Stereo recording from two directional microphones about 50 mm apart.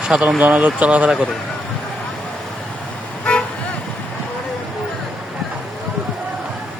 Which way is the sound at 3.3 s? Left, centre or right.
Left.